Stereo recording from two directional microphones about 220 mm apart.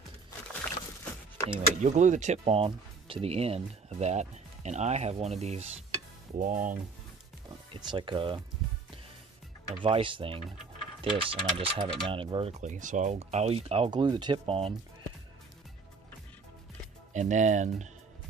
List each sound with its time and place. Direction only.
1.5 s speech: 35° right (ahead or behind)
7.7 s speech: 20° right (ahead or behind)
9.7 s speech: 25° right (ahead or behind)
17.1 s speech: 35° right (ahead or behind)